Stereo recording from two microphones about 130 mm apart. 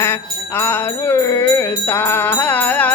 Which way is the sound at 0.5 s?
20° left (ahead or behind).